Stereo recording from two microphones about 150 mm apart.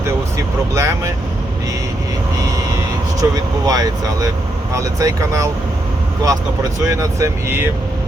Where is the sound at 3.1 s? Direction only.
25° right (ahead or behind).